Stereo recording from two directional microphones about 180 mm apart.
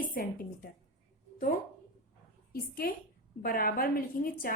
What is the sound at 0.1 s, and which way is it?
Speech, 50° left (ahead or behind).